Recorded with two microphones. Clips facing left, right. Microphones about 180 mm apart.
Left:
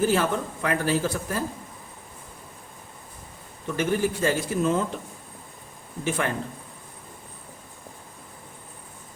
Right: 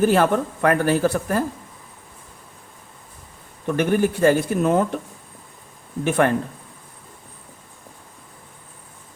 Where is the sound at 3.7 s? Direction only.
60° right (ahead or behind).